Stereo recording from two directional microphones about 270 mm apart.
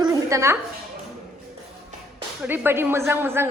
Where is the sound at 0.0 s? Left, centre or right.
Centre.